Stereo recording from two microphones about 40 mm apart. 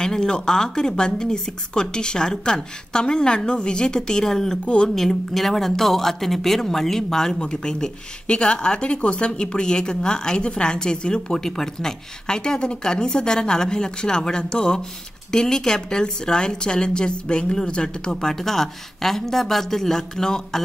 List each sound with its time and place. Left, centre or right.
0.0 s a woman's voice: centre